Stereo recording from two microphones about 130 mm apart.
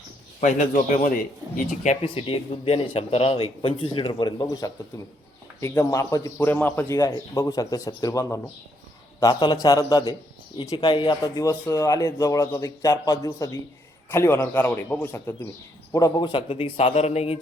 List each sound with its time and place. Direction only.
0.3 s a man's voice: 75° left (ahead or behind)
1.5 s speech: 70° left (ahead or behind)
2.0 s a man's voice: 45° left (ahead or behind)